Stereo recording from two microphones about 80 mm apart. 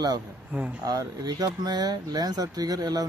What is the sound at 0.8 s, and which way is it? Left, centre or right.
Speech, right.